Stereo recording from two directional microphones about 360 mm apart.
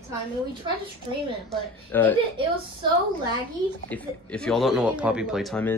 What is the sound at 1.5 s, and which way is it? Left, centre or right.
Speech, centre.